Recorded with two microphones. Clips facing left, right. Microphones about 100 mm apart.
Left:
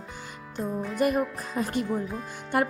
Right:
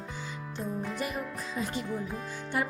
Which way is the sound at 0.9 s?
55° left (ahead or behind).